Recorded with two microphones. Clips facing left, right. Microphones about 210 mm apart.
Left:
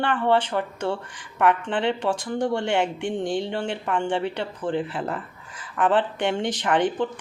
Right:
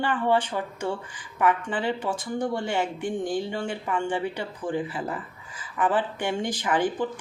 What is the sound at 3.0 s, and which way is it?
Speech, 25° left (ahead or behind).